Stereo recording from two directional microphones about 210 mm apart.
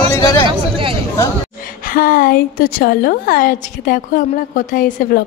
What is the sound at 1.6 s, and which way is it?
A woman's voice, 40° left (ahead or behind).